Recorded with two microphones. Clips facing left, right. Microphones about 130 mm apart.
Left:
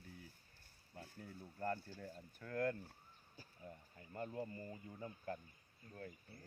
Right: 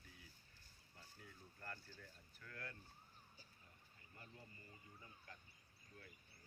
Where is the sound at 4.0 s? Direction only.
55° left (ahead or behind).